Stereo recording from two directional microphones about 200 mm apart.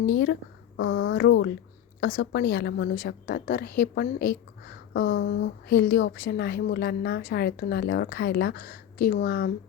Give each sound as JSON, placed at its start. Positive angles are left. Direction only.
{"t": 0.0, "sound": "a woman's voice", "side_deg": 65}